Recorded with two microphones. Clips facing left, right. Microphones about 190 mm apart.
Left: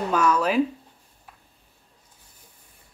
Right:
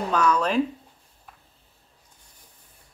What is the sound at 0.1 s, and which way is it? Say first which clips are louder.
Speech: left 1 dB; 5° left (ahead or behind).